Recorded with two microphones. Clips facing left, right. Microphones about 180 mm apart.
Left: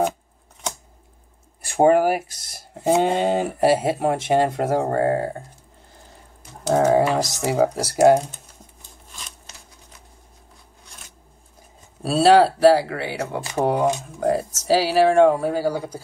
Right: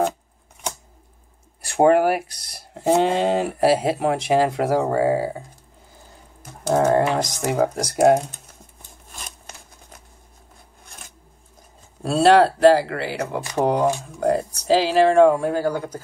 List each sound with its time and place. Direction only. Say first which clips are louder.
1.8 s speech: even; centre (ahead or behind)
2.2 s speech: even; 60° right (ahead or behind)
2.7 s speech: even; 5° left (ahead or behind)
6.7 s speech: left 1 dB; 5° left (ahead or behind)
9.2 s a sound: right 4 dB; 55° right (ahead or behind)
12.0 s speech: even; 5° left (ahead or behind)